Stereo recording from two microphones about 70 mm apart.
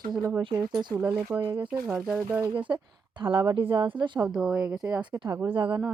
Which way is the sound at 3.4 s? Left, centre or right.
Right.